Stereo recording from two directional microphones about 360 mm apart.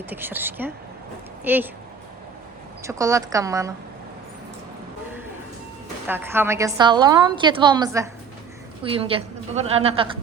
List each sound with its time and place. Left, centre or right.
0.1 s speech: centre
2.8 s a woman's voice: centre
6.1 s a woman's voice: centre